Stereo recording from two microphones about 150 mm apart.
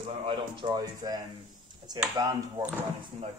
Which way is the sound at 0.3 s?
30° right (ahead or behind).